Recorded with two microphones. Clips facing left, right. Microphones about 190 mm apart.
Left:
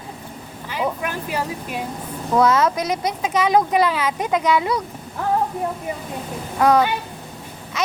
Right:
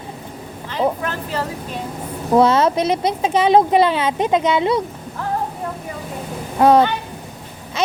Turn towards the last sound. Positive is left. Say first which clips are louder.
# right 4 dB
turn(degrees=-30)  # may be behind; listen again after turning